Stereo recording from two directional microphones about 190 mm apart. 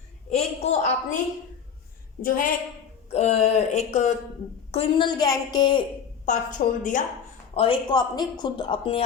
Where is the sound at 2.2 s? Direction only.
45° left (ahead or behind).